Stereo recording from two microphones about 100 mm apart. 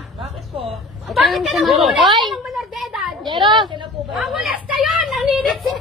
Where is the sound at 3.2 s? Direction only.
50° right (ahead or behind).